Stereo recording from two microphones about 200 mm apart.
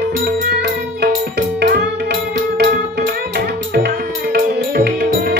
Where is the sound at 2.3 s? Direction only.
55° right (ahead or behind).